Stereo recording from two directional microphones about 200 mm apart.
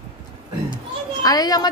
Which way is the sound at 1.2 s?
20° left (ahead or behind).